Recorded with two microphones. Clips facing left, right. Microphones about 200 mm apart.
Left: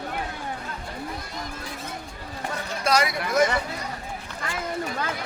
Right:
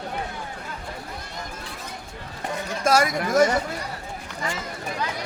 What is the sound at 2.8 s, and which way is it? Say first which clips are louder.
Speech: right 3 dB; 45° right (ahead or behind).